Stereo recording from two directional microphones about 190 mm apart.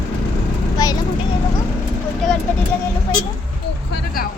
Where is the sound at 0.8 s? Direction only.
20° left (ahead or behind).